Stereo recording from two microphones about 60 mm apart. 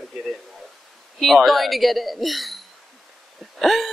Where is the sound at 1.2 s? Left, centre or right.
Centre.